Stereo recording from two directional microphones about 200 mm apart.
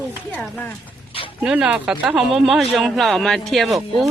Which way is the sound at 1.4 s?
5° right (ahead or behind).